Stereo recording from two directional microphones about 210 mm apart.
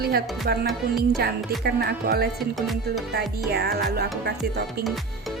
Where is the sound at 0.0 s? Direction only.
50° right (ahead or behind).